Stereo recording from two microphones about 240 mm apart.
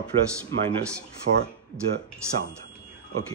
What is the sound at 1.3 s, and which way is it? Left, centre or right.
Speech, right.